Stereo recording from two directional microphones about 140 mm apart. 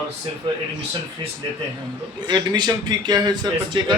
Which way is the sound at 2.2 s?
30° right (ahead or behind).